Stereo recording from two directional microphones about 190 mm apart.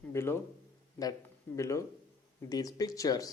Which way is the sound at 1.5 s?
15° left (ahead or behind).